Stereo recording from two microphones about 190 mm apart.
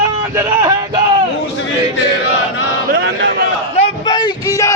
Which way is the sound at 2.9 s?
65° right (ahead or behind).